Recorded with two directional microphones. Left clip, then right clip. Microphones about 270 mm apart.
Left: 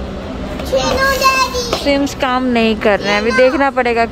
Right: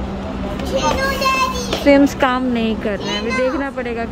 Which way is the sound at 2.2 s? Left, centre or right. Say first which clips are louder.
Left 4 dB; centre.